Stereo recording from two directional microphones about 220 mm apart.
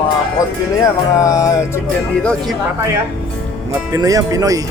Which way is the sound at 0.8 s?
15° left (ahead or behind).